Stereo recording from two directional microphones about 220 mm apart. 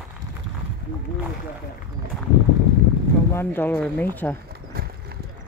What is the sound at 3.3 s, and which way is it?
Speech, 10° left (ahead or behind).